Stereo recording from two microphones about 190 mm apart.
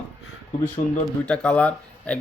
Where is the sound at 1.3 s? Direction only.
5° left (ahead or behind).